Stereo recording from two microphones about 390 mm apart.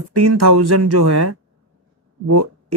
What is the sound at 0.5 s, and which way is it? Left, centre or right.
Speech, right.